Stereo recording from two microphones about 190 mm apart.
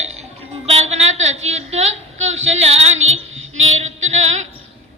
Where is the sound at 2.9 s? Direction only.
90° right.